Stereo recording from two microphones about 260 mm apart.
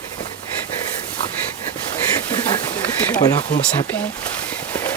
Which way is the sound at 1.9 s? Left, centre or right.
Centre.